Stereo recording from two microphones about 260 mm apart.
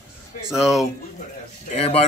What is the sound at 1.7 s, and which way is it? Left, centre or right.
Speech, left.